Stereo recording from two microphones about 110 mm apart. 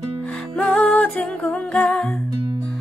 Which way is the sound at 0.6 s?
10° left (ahead or behind).